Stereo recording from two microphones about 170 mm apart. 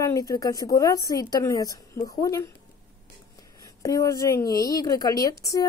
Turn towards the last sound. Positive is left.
turn(degrees=20)  # may be behind; listen again after turning